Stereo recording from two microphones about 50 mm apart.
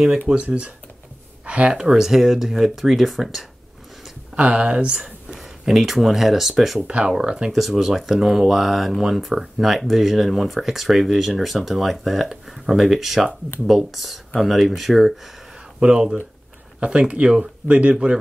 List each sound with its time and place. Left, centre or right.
0.3 s speech: centre
1.4 s a sound: right
1.7 s speech: centre
4.4 s speech: centre
5.3 s speech: centre
6.9 s speech: right
7.5 s speech: centre
15.8 s speech: centre